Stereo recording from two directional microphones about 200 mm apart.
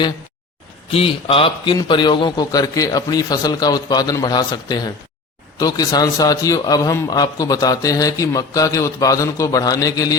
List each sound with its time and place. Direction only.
0.9 s a man's voice: 30° left (ahead or behind)